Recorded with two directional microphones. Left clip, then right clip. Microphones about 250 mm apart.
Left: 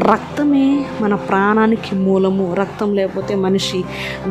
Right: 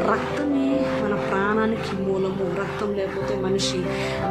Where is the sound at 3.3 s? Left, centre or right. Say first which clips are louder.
Left 6 dB; left.